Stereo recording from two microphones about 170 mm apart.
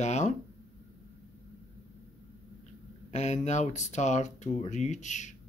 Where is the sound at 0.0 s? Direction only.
45° left (ahead or behind).